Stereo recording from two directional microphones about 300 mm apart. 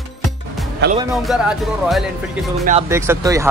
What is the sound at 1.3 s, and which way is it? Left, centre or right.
Speech, centre.